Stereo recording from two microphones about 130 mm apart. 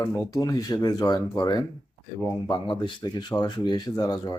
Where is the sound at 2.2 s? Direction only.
20° left (ahead or behind).